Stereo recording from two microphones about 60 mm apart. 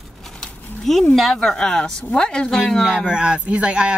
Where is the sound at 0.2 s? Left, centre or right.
Centre.